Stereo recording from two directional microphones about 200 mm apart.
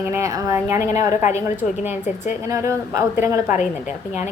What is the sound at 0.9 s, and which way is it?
Speech, 35° left (ahead or behind).